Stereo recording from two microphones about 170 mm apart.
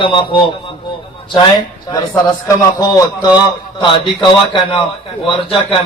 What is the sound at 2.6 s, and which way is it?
A man's voice, 20° left (ahead or behind).